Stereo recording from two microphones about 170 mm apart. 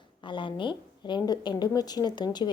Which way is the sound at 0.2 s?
30° left (ahead or behind).